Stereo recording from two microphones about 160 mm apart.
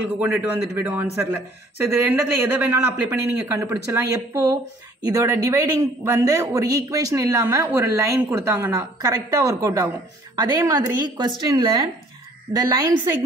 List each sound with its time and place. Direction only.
0.2 s a man's voice: 10° right (ahead or behind)